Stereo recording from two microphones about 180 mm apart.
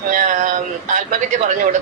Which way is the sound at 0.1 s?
45° right (ahead or behind).